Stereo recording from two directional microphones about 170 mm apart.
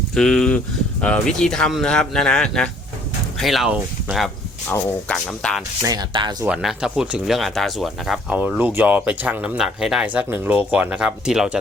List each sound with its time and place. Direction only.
0.1 s speech: 5° left (ahead or behind)
4.7 s speech: 5° left (ahead or behind)
5.8 s speech: 25° right (ahead or behind)
6.4 s speech: 5° right (ahead or behind)